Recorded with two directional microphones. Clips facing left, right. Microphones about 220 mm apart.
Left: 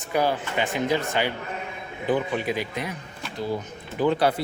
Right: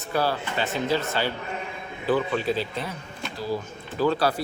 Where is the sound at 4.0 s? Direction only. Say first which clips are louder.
Left 1 dB; 20° left (ahead or behind).